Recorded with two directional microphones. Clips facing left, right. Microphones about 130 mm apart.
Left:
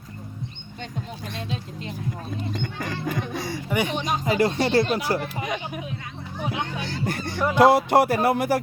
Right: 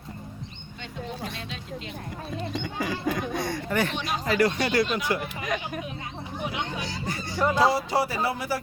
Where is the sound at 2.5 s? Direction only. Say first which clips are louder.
Even; 5° right (ahead or behind).